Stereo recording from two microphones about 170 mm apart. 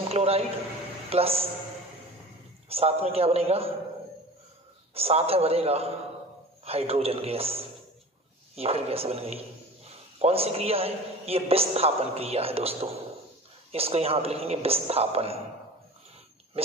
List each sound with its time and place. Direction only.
0.1 s a man's voice: 35° right (ahead or behind)
2.7 s a man's voice: 35° right (ahead or behind)
4.9 s a man's voice: 35° right (ahead or behind)
16.6 s a man's voice: 35° right (ahead or behind)